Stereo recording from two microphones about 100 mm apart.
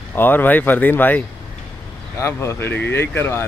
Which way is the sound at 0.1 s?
20° left (ahead or behind).